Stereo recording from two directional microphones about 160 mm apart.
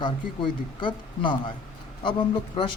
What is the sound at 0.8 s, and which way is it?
Speech, 30° left (ahead or behind).